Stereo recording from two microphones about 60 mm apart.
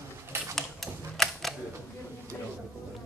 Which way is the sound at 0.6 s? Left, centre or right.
Centre.